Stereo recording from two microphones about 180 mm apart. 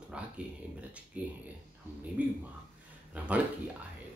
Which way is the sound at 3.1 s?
10° right (ahead or behind).